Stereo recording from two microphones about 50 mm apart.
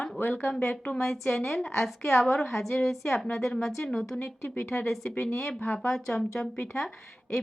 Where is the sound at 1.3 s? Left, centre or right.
Left.